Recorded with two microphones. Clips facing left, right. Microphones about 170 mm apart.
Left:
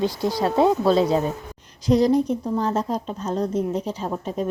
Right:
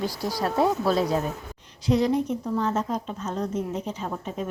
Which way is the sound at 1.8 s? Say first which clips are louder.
Left 4 dB; 35° left (ahead or behind).